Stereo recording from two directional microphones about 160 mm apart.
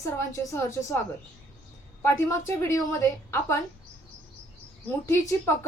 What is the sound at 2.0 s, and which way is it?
A woman's voice, 20° left (ahead or behind).